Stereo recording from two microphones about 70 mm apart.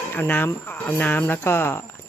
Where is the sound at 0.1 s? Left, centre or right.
Left.